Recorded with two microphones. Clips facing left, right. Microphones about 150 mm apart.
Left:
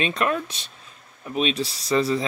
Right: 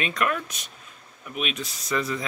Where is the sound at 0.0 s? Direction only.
25° left (ahead or behind).